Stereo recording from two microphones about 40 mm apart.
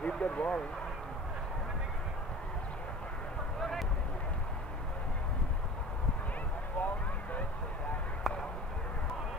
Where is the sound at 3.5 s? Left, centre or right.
Centre.